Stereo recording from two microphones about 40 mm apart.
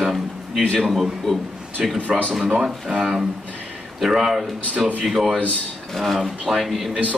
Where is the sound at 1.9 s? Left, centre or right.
Right.